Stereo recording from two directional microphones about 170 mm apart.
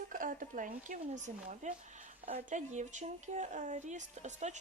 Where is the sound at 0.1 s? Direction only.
55° right (ahead or behind).